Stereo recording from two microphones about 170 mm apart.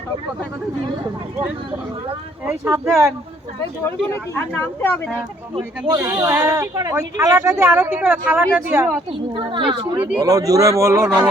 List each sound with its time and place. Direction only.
2.4 s speech: 15° right (ahead or behind)
4.1 s speech: 10° left (ahead or behind)
5.9 s speech: 15° right (ahead or behind)
9.3 s a man's voice: 30° right (ahead or behind)